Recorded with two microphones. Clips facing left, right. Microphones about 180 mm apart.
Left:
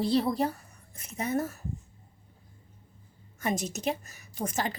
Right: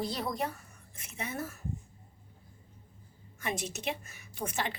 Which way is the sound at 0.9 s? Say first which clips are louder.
Left 8 dB; 40° left (ahead or behind).